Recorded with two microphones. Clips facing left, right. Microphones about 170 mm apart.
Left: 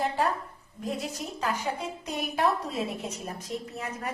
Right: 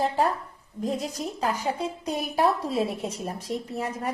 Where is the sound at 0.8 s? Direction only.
35° right (ahead or behind).